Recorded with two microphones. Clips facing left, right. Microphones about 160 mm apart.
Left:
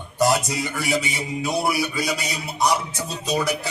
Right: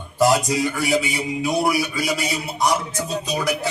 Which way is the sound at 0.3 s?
Centre (ahead or behind).